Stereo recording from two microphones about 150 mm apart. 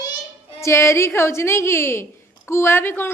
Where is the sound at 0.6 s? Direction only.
20° left (ahead or behind).